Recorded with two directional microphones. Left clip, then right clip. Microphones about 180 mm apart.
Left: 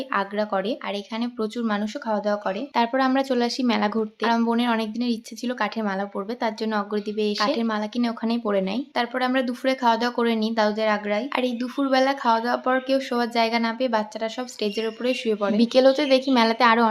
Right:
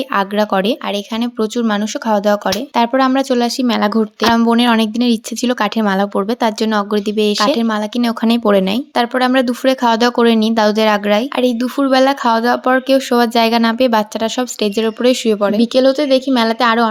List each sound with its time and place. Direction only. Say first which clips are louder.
0.1 s speech: right 9 dB; 45° right (ahead or behind)
2.7 s speech: right 7 dB; 35° right (ahead or behind)
15.5 s a woman's voice: right 1 dB; 25° right (ahead or behind)